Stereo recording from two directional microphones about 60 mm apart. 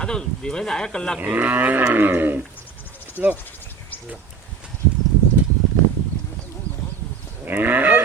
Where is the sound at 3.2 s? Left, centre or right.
Centre.